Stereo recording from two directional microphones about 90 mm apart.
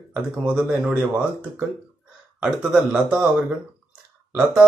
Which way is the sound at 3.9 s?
15° right (ahead or behind).